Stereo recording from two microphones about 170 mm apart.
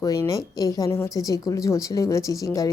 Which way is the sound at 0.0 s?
20° left (ahead or behind).